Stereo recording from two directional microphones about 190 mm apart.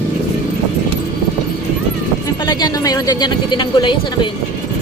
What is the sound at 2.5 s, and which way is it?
Speech, 20° left (ahead or behind).